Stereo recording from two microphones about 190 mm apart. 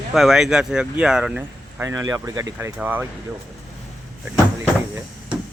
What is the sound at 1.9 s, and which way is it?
Speech, 20° right (ahead or behind).